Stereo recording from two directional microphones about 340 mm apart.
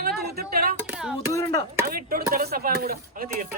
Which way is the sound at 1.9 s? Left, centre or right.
Right.